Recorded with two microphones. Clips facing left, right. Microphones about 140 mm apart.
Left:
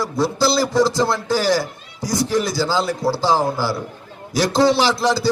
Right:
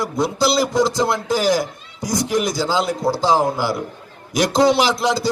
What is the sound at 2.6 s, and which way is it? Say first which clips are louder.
Speech: even; centre (ahead or behind).